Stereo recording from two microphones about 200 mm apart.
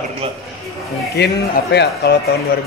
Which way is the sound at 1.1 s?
55° left (ahead or behind).